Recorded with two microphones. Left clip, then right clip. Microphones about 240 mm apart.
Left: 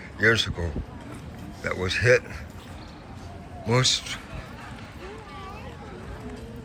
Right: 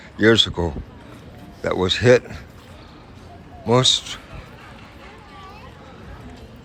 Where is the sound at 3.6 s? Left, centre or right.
Centre.